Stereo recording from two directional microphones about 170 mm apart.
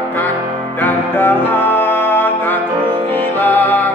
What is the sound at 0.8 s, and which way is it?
Music, 10° left (ahead or behind).